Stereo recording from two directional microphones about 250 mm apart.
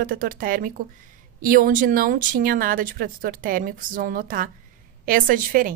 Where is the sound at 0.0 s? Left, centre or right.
Right.